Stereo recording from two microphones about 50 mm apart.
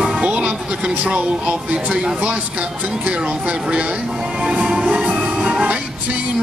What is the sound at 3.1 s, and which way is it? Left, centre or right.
Speech, right.